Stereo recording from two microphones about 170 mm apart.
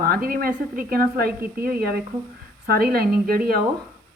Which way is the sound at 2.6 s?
60° right (ahead or behind).